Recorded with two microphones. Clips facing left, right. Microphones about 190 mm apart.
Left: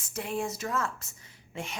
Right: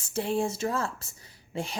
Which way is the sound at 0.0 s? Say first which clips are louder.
Right 5 dB; 30° right (ahead or behind).